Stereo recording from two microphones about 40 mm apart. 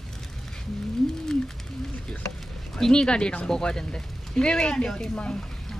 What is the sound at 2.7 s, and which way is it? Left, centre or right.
Speech, centre.